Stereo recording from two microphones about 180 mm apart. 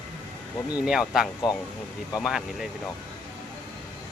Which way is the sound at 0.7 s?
5° right (ahead or behind).